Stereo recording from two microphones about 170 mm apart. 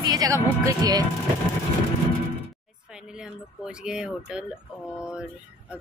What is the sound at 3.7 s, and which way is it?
Speech, 5° right (ahead or behind).